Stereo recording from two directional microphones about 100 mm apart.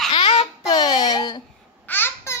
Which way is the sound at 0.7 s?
45° left (ahead or behind).